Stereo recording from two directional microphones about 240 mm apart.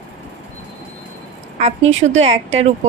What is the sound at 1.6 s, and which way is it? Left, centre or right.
Speech, right.